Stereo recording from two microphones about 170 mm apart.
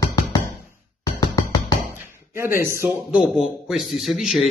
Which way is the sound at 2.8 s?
10° right (ahead or behind).